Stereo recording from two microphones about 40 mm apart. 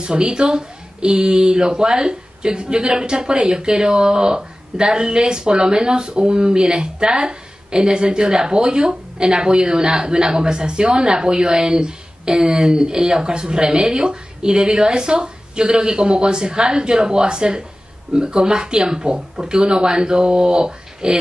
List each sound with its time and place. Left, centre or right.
0.0 s a woman's voice: right